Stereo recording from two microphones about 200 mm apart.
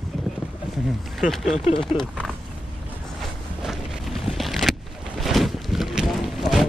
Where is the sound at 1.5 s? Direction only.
30° left (ahead or behind).